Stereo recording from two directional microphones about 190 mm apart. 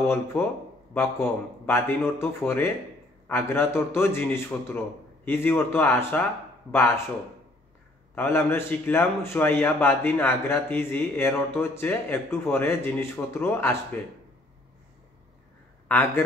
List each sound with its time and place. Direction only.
0.0 s a man's voice: 10° left (ahead or behind)
8.1 s a man's voice: 10° left (ahead or behind)